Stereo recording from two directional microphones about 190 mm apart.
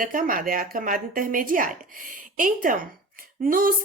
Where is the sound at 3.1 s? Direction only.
50° right (ahead or behind).